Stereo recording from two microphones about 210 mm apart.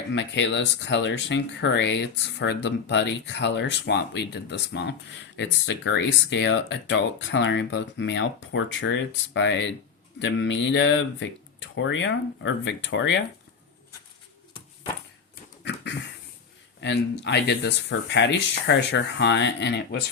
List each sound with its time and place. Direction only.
0.1 s speech: 60° left (ahead or behind)
15.6 s a sound: 55° left (ahead or behind)
16.8 s speech: 55° left (ahead or behind)